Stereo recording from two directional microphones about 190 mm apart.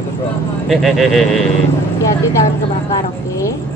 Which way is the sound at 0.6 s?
Centre (ahead or behind).